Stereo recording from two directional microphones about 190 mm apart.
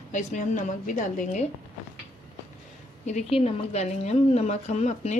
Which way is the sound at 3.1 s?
35° left (ahead or behind).